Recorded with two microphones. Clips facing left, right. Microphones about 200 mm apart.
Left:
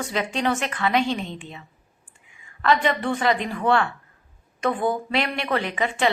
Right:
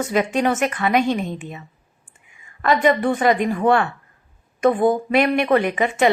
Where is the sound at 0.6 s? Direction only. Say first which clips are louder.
Right 4 dB; 50° right (ahead or behind).